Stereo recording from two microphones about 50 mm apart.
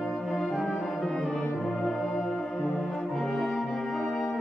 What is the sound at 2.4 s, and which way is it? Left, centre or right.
Music, left.